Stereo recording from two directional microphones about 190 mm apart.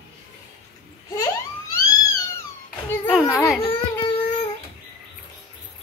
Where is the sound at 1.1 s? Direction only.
15° left (ahead or behind).